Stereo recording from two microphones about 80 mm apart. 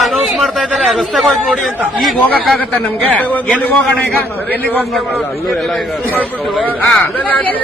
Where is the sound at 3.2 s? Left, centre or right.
Centre.